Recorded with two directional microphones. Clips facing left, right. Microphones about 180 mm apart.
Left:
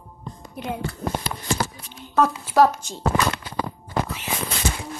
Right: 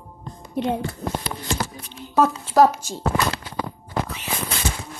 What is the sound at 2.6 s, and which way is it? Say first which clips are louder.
Speech: right 1 dB; 5° right (ahead or behind).